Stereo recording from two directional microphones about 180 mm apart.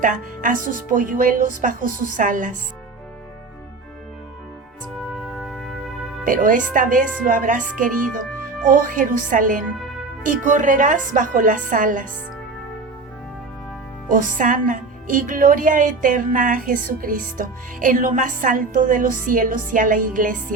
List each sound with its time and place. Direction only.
0.0 s a woman's voice: 50° right (ahead or behind)
5.4 s music: centre (ahead or behind)
6.2 s a woman's voice: 50° right (ahead or behind)
14.1 s a woman's voice: 50° right (ahead or behind)